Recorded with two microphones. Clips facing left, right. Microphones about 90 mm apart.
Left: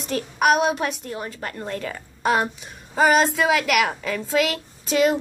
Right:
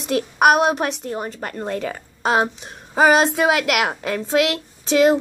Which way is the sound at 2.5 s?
65° right (ahead or behind).